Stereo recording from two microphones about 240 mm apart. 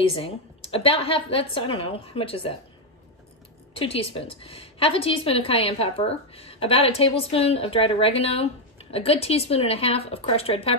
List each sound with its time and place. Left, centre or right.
0.0 s a woman's voice: left
3.7 s a woman's voice: left